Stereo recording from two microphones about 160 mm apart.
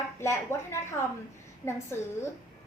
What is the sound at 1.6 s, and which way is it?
Speech, 15° left (ahead or behind).